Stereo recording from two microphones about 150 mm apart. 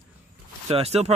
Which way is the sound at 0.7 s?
45° right (ahead or behind).